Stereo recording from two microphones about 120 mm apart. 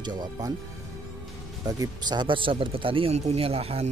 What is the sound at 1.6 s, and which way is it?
Speech, 30° right (ahead or behind).